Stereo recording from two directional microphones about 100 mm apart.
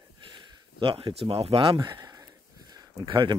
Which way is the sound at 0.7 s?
60° right (ahead or behind).